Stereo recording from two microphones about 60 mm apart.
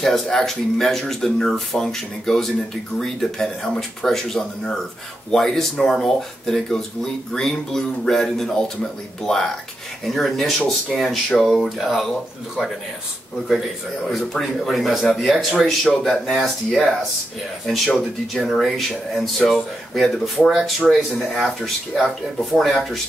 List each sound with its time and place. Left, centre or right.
0.0 s speech: centre
14.0 s speech: centre
17.9 s speech: centre